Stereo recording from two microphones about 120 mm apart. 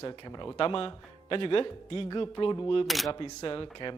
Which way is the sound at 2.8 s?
Centre (ahead or behind).